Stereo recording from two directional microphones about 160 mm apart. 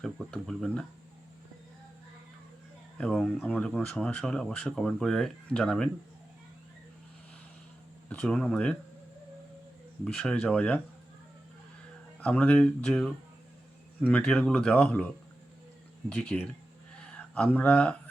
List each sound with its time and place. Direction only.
0.0 s speech: centre (ahead or behind)
3.0 s speech: 5° left (ahead or behind)
8.1 s speech: 5° left (ahead or behind)
10.0 s speech: 5° left (ahead or behind)
12.2 s speech: 10° left (ahead or behind)